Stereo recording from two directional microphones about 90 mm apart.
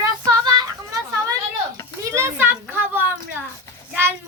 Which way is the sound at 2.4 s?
25° right (ahead or behind).